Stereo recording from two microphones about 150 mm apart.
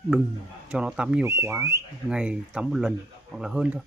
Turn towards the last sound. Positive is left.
turn(degrees=-5)  # may be behind; listen again after turning